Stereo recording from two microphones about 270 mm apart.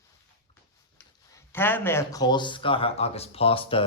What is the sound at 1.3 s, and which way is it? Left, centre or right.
Speech, centre.